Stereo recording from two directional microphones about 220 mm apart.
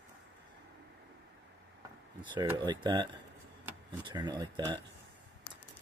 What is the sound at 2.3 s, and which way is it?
Speech, 20° right (ahead or behind).